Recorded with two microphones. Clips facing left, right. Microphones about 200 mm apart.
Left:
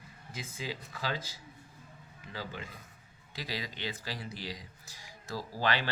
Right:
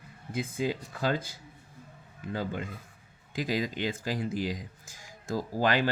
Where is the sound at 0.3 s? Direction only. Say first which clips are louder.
Right 10 dB; 55° right (ahead or behind).